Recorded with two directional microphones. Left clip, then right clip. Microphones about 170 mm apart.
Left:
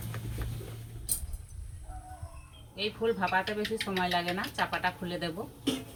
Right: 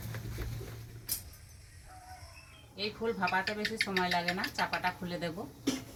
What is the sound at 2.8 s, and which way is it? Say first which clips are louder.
Speech: left 4 dB; centre (ahead or behind).